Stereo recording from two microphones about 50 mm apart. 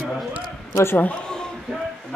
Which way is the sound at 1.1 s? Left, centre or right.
Centre.